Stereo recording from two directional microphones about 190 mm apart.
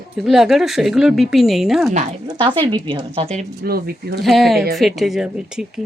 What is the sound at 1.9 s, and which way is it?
Speech, 40° right (ahead or behind).